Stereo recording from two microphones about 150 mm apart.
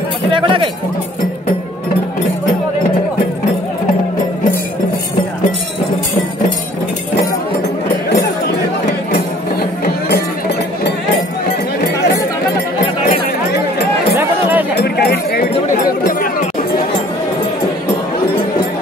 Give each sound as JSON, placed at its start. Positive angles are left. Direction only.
{"t": 0.3, "sound": "speech", "side_deg": -35}
{"t": 9.1, "sound": "music", "side_deg": 90}
{"t": 14.8, "sound": "a sound", "side_deg": 90}